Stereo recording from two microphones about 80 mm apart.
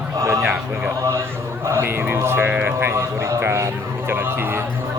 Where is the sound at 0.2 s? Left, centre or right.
Right.